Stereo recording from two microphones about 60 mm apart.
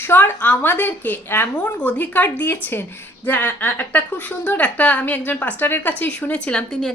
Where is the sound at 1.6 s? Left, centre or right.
Left.